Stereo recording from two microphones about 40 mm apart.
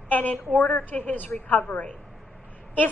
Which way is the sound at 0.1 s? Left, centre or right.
Left.